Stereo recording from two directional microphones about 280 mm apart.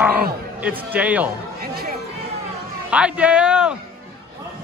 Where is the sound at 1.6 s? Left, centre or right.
Right.